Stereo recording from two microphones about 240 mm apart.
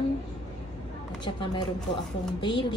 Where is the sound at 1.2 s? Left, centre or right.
Centre.